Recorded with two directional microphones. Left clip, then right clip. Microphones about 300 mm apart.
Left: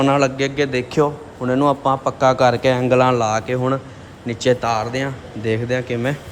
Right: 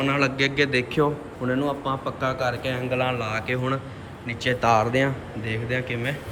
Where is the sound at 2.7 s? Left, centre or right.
Centre.